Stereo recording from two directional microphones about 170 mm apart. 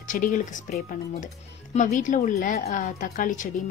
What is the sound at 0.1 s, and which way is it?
Speech, 50° left (ahead or behind).